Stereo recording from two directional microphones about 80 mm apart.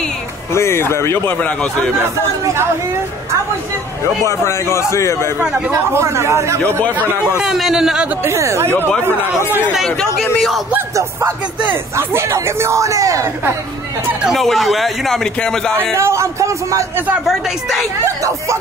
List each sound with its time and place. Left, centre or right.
0.5 s a man's voice: left
1.4 s a man's voice: centre
4.5 s a man's voice: left
5.9 s speech: right
7.3 s a man's voice: centre
8.2 s speech: right
9.8 s a man's voice: centre
11.0 s speech: right
14.2 s a man's voice: centre
16.0 s speech: right
17.3 s a man's voice: centre